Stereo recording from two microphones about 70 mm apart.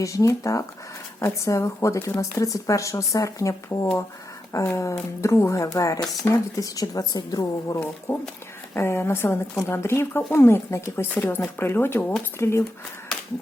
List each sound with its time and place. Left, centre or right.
0.0 s speech: left
6.3 s speech: left
6.6 s a woman's voice: left
8.1 s speech: left